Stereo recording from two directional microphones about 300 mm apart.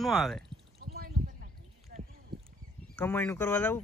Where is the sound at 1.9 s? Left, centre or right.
Right.